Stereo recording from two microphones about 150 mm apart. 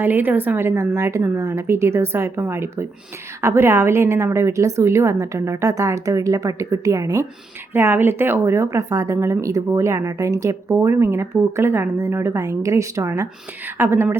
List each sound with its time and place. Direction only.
0.0 s a woman's voice: 15° right (ahead or behind)